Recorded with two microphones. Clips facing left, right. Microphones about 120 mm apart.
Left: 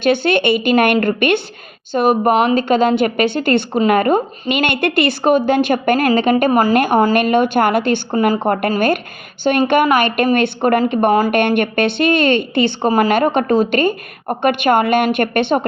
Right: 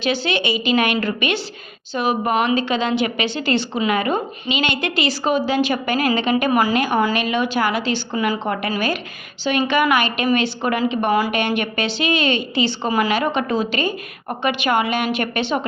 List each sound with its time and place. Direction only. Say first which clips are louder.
0.0 s a woman's voice: left 7 dB; 55° left (ahead or behind)